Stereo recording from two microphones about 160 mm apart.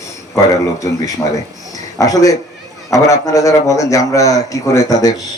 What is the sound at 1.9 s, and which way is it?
A man's voice, 20° left (ahead or behind).